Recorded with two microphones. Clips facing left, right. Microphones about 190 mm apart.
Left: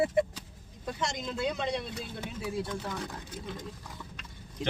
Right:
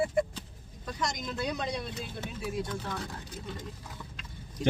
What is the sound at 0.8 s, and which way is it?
Speech, 30° left (ahead or behind).